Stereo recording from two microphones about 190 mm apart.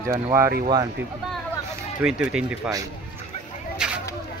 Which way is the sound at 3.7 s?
5° right (ahead or behind).